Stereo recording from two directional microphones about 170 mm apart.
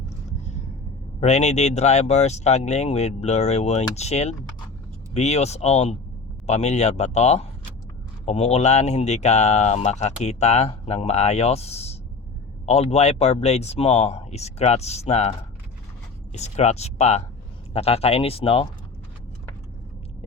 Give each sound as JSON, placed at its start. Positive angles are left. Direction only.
{"t": 1.2, "sound": "speech", "side_deg": 40}